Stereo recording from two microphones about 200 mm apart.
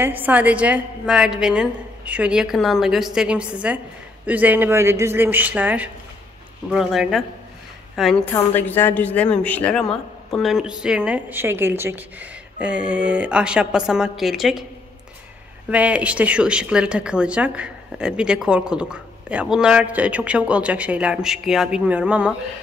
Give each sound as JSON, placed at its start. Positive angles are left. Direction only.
{"t": 0.0, "sound": "a woman's voice", "side_deg": -10}
{"t": 15.7, "sound": "a woman's voice", "side_deg": -5}